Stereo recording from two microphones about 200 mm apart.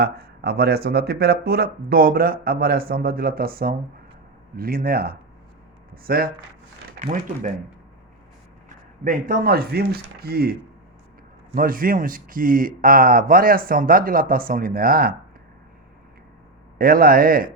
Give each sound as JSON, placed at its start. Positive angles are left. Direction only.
{"t": 0.0, "sound": "speech", "side_deg": -50}
{"t": 9.0, "sound": "speech", "side_deg": -45}
{"t": 16.7, "sound": "speech", "side_deg": -45}